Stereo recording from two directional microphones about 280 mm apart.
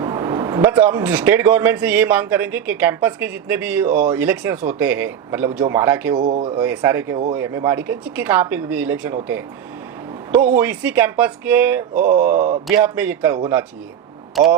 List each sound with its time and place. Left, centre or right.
0.0 s speech: centre
6.2 s speech: right; by 9.1 s centre
10.3 s speech: centre